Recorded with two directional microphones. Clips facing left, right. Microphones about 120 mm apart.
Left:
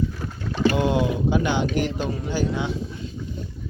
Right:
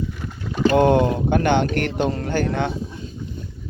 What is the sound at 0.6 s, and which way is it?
Speech, 50° right (ahead or behind).